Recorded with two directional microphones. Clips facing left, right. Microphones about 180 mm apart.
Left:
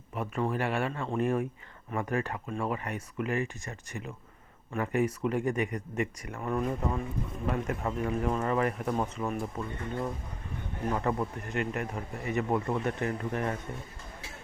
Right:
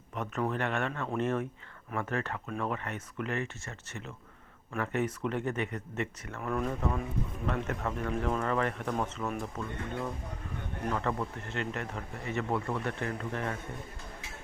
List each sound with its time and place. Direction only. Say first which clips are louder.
0.1 s speech: left 2 dB; 10° left (ahead or behind)
10.8 s speech: left 3 dB; 15° left (ahead or behind)